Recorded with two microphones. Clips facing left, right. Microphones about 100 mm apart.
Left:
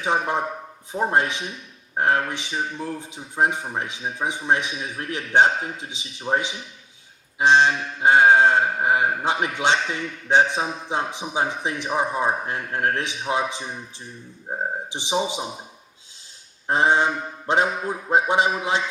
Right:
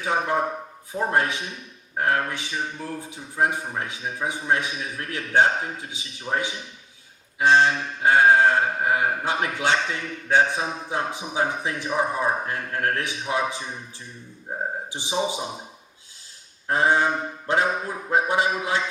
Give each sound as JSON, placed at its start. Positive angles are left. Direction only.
{"t": 0.0, "sound": "mantra", "side_deg": 20}
{"t": 16.6, "sound": "mantra", "side_deg": 20}